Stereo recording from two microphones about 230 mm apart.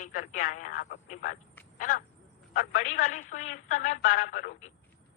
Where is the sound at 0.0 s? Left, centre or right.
Left.